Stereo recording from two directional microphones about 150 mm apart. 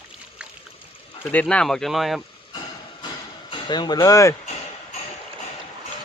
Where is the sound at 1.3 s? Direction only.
10° left (ahead or behind).